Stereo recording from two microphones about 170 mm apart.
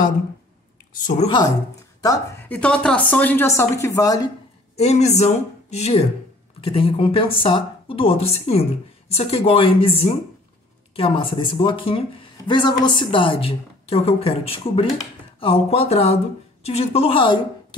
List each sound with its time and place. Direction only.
2.0 s a woman's voice: 20° left (ahead or behind)
2.4 s a woman's voice: 10° left (ahead or behind)
4.7 s a woman's voice: 40° left (ahead or behind)